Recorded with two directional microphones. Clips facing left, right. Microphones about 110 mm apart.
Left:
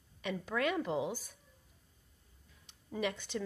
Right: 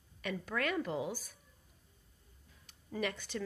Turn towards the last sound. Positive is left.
turn(degrees=15)  # may be behind; listen again after turning